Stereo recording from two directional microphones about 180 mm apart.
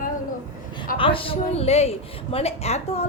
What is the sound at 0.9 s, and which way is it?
A woman's voice, 30° left (ahead or behind).